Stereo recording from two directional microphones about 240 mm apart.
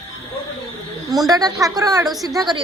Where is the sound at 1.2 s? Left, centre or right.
Centre.